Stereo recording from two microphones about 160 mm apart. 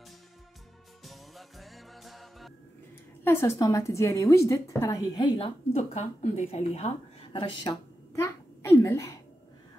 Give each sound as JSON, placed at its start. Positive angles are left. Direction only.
{"t": 1.0, "sound": "music", "side_deg": 0}
{"t": 3.3, "sound": "a woman's voice", "side_deg": 15}
{"t": 8.2, "sound": "a sound", "side_deg": 15}